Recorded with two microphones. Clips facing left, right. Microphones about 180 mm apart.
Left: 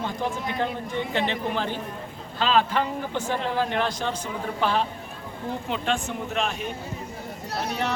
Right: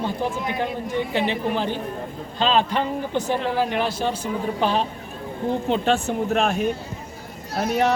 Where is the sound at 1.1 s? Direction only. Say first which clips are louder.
Right 2 dB; 10° right (ahead or behind).